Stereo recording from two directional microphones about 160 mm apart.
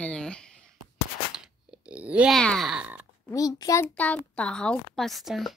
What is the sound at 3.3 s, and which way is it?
Speech, 20° left (ahead or behind).